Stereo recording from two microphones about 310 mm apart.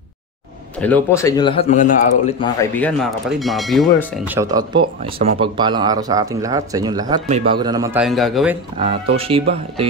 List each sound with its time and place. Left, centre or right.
0.7 s a man's voice: centre; by 2.3 s left
2.6 s speech: centre
8.7 s speech: centre